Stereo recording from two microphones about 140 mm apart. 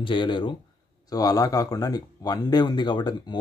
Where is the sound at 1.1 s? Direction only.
25° left (ahead or behind).